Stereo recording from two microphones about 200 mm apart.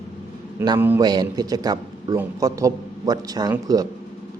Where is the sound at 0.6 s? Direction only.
20° right (ahead or behind).